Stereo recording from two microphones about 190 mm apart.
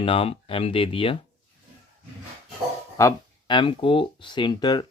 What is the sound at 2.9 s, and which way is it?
Speech, 20° left (ahead or behind).